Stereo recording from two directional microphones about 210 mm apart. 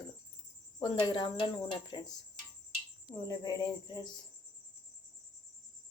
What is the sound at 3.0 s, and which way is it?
Speech, 20° left (ahead or behind).